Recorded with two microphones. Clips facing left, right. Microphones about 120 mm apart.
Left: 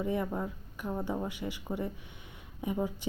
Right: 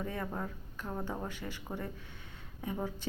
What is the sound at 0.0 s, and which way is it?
A woman's voice, 15° left (ahead or behind).